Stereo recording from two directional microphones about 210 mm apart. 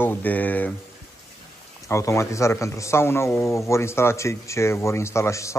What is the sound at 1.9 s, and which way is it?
Speech, 15° left (ahead or behind).